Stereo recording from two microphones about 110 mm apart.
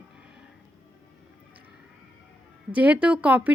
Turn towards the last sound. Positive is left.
turn(degrees=-10)  # may be behind; listen again after turning